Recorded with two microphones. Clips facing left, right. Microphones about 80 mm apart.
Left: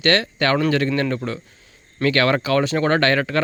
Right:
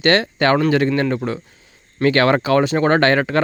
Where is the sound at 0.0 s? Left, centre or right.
Right.